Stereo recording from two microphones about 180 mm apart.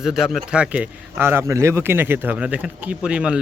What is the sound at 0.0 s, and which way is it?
Speech, 5° right (ahead or behind).